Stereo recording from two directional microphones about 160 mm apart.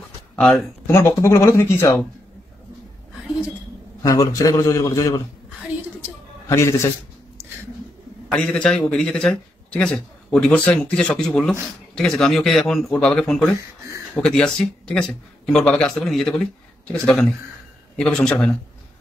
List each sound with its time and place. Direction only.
0.4 s a man's voice: 5° left (ahead or behind)
0.8 s speech: 15° left (ahead or behind)
4.0 s a man's voice: 20° left (ahead or behind)
6.5 s speech: 15° left (ahead or behind)
8.3 s a man's voice: 5° left (ahead or behind)